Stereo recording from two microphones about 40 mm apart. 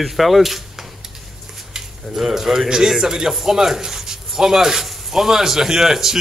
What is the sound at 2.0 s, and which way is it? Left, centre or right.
Speech, centre.